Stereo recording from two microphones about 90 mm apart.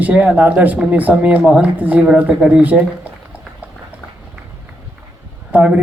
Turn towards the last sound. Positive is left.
turn(degrees=-15)  # may be behind; listen again after turning